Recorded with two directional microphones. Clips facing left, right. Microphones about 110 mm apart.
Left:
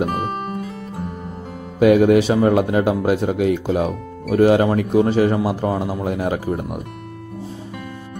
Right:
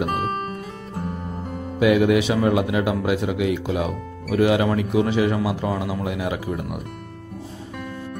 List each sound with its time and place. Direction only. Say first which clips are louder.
0.0 s music: left 2 dB; centre (ahead or behind)
1.8 s a man's voice: left 5 dB; 40° left (ahead or behind)